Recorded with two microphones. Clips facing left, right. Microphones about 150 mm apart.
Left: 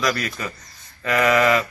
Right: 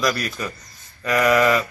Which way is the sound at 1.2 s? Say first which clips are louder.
Right 1 dB; 10° right (ahead or behind).